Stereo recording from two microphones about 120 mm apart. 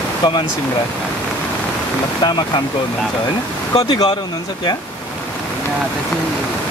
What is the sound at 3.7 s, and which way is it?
Speech, 35° left (ahead or behind).